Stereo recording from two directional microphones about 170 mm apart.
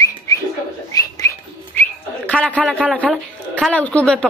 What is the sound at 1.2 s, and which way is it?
Whistling, 20° left (ahead or behind).